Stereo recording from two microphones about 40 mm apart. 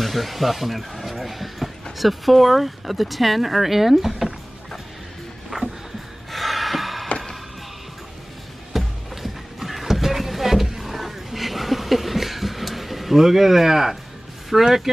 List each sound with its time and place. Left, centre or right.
0.0 s speech: centre
5.5 s music: centre
6.3 s gasp: centre
8.7 s music: centre
14.5 s speech: centre